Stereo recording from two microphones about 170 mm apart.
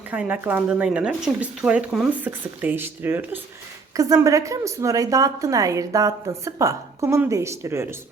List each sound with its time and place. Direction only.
0.1 s a woman's voice: 10° right (ahead or behind)